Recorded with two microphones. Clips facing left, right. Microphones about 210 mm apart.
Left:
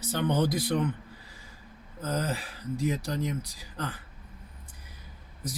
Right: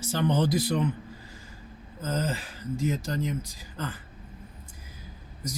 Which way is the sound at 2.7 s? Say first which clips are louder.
Right 1 dB; 35° left (ahead or behind).